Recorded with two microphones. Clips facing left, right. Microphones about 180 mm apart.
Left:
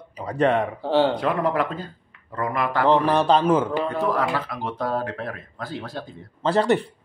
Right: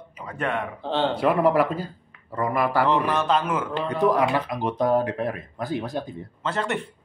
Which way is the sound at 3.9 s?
15° right (ahead or behind).